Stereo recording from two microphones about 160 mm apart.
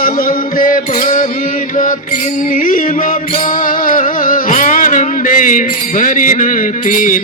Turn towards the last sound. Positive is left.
turn(degrees=55)  # may be behind; listen again after turning